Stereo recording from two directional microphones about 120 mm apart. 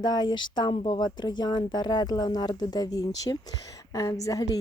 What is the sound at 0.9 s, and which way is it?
Speech, 35° left (ahead or behind).